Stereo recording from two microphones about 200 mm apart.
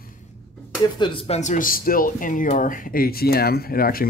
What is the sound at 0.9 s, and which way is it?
Speech, 25° left (ahead or behind).